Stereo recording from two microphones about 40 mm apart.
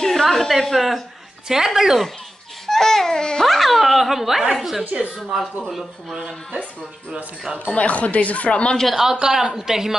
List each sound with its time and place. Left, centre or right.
0.0 s a woman's voice: centre
1.5 s speech: centre
2.6 s speech: centre
3.4 s speech: centre
7.6 s speech: left
9.0 s speech: centre